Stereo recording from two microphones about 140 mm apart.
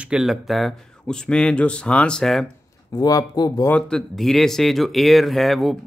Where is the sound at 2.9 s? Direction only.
25° left (ahead or behind).